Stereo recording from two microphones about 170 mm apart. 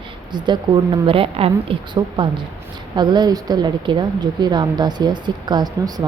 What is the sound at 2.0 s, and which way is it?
A woman's voice, 20° right (ahead or behind).